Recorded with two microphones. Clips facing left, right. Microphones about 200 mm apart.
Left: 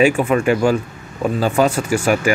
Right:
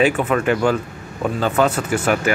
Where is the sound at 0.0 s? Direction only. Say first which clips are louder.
Left 3 dB; 10° left (ahead or behind).